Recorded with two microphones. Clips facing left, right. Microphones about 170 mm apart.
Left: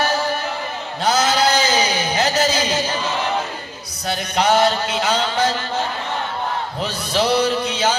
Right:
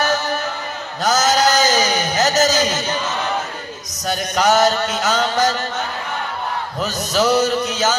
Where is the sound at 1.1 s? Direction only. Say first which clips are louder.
Right 2 dB; 45° right (ahead or behind).